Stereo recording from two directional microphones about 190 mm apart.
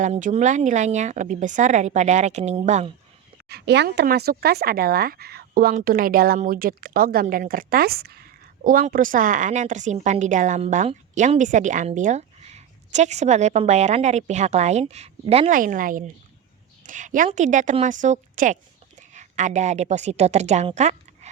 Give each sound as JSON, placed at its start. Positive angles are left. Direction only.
{"t": 0.0, "sound": "speech", "side_deg": -40}
{"t": 3.5, "sound": "speech", "side_deg": -60}
{"t": 15.5, "sound": "a woman's voice", "side_deg": -45}